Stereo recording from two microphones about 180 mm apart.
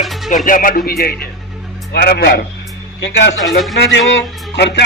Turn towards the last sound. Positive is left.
turn(degrees=70)  # may be behind; listen again after turning